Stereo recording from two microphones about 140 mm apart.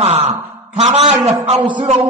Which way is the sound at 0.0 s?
45° right (ahead or behind).